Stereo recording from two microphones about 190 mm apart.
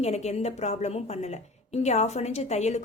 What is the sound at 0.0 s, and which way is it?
A woman's voice, 35° left (ahead or behind).